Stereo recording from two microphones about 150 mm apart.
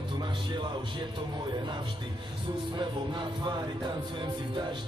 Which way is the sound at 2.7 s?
30° right (ahead or behind).